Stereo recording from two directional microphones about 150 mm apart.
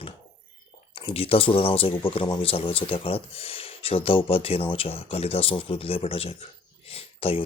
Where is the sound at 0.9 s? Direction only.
40° left (ahead or behind).